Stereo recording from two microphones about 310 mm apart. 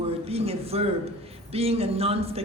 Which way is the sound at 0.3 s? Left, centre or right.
Centre.